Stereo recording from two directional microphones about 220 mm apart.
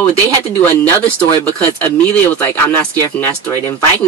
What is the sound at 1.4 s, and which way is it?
Speech, 5° left (ahead or behind).